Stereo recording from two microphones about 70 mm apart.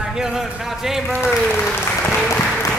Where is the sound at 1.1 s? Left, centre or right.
Left.